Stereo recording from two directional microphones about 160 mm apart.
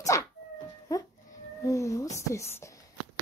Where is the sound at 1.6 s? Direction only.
20° left (ahead or behind).